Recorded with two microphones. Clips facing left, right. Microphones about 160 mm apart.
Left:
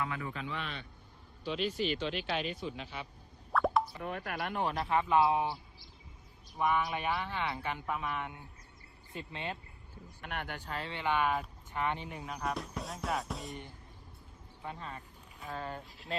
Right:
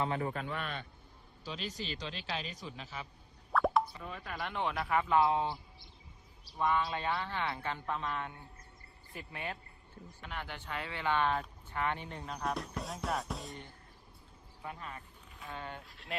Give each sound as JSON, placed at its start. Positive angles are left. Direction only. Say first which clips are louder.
{"t": 0.0, "sound": "a man's voice", "louder": "right 3 dB", "side_deg": -35}
{"t": 1.5, "sound": "speech", "louder": "left 8 dB", "side_deg": -40}
{"t": 3.5, "sound": "plop", "louder": "even", "side_deg": 0}
{"t": 4.0, "sound": "speech", "louder": "left 5 dB", "side_deg": 65}
{"t": 4.4, "sound": "a man's voice", "louder": "even", "side_deg": 45}
{"t": 6.6, "sound": "a man's voice", "louder": "left 1 dB", "side_deg": 15}
{"t": 10.2, "sound": "speech", "louder": "left 3 dB", "side_deg": 60}
{"t": 10.6, "sound": "speech", "louder": "left 1 dB", "side_deg": 35}
{"t": 11.0, "sound": "speech", "louder": "even", "side_deg": 10}
{"t": 13.5, "sound": "a man's voice", "louder": "left 3 dB", "side_deg": 20}
{"t": 14.6, "sound": "speech", "louder": "left 1 dB", "side_deg": 30}